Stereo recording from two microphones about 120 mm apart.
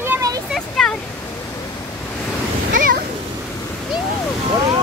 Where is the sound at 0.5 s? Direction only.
5° left (ahead or behind).